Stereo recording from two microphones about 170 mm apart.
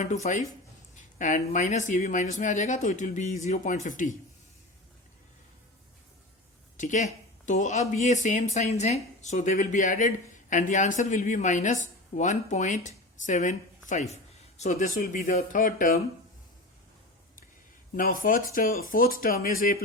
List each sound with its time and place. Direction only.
0.0 s speech: 45° left (ahead or behind)
6.7 s speech: 45° left (ahead or behind)
17.9 s speech: 55° left (ahead or behind)